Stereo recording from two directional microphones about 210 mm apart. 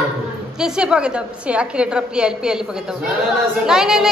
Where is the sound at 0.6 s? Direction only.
5° right (ahead or behind).